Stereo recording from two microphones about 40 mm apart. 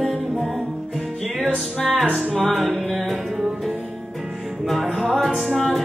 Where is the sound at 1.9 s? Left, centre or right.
Right.